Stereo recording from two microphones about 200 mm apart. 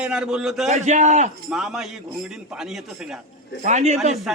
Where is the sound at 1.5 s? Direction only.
5° right (ahead or behind).